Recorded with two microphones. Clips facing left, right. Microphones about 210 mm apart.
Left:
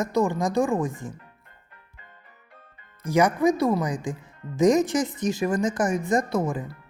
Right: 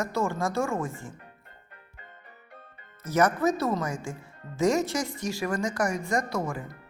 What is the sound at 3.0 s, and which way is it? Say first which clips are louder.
Speech: left 3 dB; 15° left (ahead or behind).